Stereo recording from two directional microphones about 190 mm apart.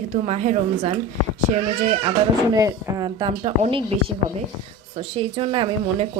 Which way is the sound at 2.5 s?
20° right (ahead or behind).